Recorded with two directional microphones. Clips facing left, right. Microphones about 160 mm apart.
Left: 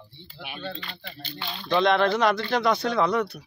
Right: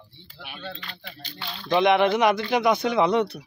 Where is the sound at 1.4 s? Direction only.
5° left (ahead or behind).